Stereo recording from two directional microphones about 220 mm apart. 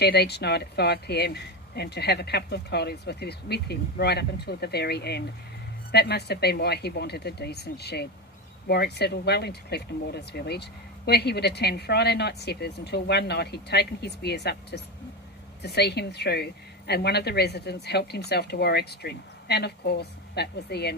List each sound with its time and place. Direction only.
0.0 s speech: 50° left (ahead or behind)